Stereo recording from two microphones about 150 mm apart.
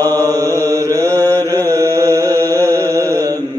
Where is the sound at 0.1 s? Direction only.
25° right (ahead or behind).